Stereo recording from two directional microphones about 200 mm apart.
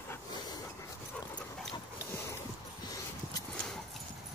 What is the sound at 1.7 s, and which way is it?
Dog, 20° left (ahead or behind).